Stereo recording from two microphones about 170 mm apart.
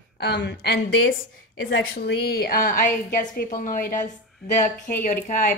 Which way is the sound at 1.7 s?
75° left (ahead or behind).